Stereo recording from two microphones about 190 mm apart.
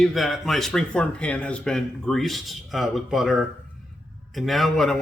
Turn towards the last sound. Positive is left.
turn(degrees=0)  # may be behind; listen again after turning